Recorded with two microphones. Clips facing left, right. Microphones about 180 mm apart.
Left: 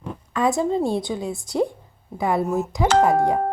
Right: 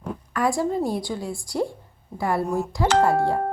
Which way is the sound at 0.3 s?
20° left (ahead or behind).